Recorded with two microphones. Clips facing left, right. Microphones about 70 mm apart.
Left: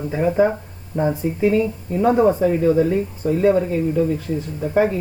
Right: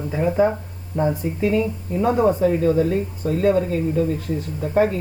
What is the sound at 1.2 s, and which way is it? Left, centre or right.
Speech, left.